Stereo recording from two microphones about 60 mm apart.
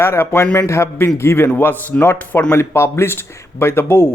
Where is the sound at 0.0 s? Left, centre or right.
Left.